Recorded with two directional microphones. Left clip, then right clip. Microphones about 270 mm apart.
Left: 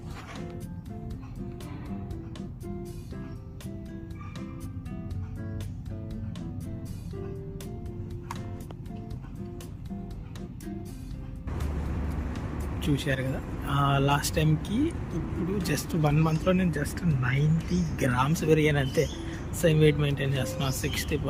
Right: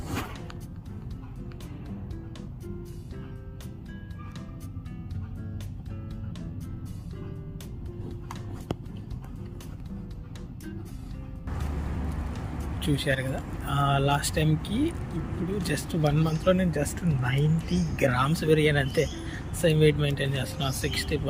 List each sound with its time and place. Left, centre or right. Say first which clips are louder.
12.8 s speech: right 2 dB; centre